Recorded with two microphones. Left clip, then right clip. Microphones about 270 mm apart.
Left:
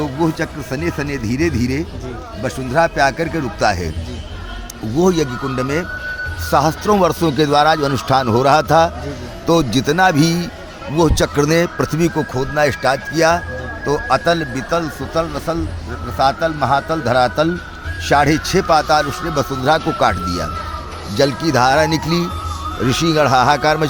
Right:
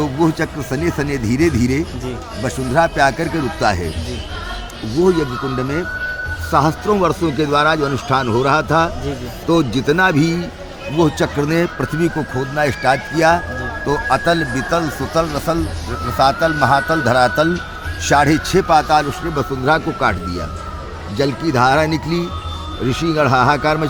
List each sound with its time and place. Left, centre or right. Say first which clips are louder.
0.0 s speech: right 2 dB; centre
4.9 s a man's voice: even; left